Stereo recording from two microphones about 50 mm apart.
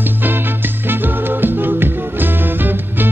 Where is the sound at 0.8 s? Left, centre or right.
Right.